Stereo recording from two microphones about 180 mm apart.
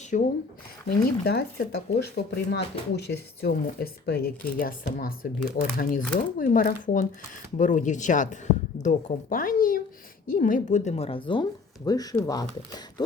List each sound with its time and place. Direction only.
0.1 s speech: 45° left (ahead or behind)
1.2 s a woman's voice: 60° left (ahead or behind); by 13.1 s 20° left (ahead or behind)